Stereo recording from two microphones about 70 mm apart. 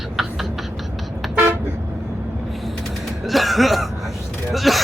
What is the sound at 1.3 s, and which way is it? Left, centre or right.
Toot, right.